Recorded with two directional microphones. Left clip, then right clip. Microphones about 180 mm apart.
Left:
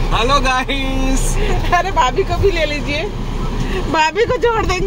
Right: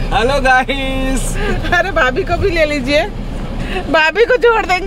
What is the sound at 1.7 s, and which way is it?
Speech, 55° right (ahead or behind).